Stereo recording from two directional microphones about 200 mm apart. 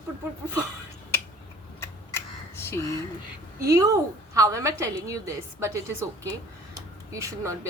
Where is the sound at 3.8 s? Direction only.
15° right (ahead or behind).